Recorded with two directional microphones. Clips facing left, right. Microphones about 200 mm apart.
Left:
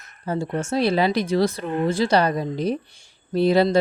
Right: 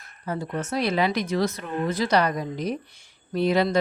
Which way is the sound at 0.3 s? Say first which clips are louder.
Left 4 dB; 30° left (ahead or behind).